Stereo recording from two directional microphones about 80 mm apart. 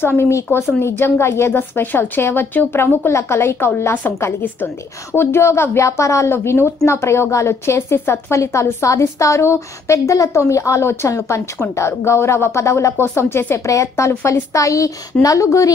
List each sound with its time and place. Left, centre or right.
0.2 s a woman's voice: left
5.1 s a woman's voice: left